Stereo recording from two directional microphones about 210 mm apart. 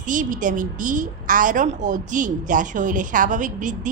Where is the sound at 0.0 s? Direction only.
40° right (ahead or behind).